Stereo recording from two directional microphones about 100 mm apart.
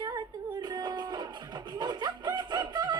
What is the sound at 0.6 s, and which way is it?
Music, 45° right (ahead or behind).